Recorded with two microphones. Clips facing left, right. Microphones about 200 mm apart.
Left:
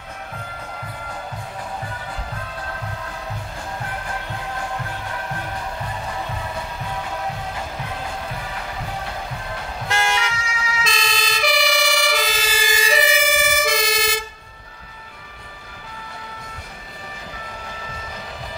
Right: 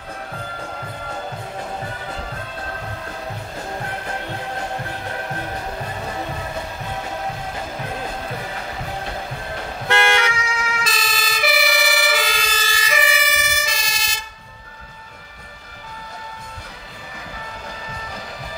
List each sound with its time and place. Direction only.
9.8 s vehicle: 60° right (ahead or behind)
10.8 s emergency vehicle: centre (ahead or behind)
12.7 s emergency vehicle: 30° left (ahead or behind)
13.2 s emergency vehicle: 50° left (ahead or behind)